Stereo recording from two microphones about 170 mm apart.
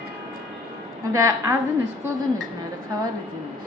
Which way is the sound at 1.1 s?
20° right (ahead or behind).